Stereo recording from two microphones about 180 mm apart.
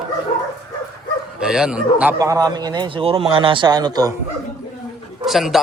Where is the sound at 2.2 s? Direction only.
20° right (ahead or behind).